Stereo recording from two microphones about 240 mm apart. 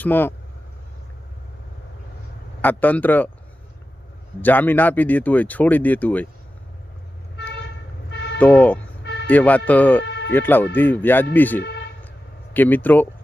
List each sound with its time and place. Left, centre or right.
0.0 s speech: centre
2.6 s speech: centre
4.4 s speech: centre
8.1 s vehicle: left
8.4 s speech: centre
10.0 s a sound: left
10.3 s speech: centre